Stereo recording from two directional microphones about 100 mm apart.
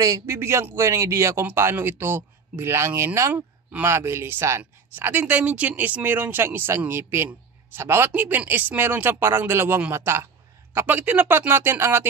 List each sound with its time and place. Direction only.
0.0 s speech: 30° right (ahead or behind)